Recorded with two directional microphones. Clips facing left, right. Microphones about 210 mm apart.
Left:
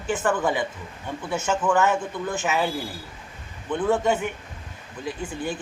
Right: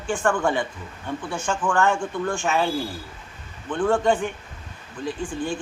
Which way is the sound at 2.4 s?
20° left (ahead or behind).